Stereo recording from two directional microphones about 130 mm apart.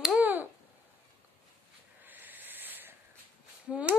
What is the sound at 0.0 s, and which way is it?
Finger snapping, 10° right (ahead or behind).